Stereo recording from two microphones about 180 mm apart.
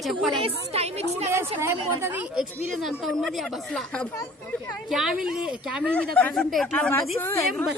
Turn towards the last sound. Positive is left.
turn(degrees=15)  # may be behind; listen again after turning